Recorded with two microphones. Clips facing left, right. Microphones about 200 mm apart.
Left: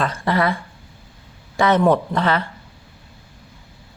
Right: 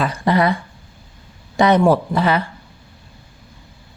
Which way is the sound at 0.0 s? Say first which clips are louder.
Right 3 dB; 15° right (ahead or behind).